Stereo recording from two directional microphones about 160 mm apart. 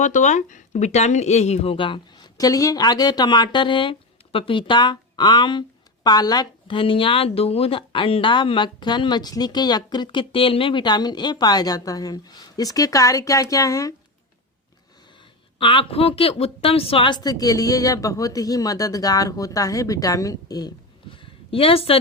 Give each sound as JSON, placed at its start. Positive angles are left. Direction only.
{"t": 0.0, "sound": "speech", "side_deg": 50}
{"t": 15.5, "sound": "speech", "side_deg": 35}